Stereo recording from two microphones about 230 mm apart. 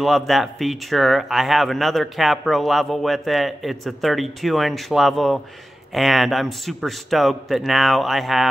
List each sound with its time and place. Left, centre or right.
0.0 s speech: centre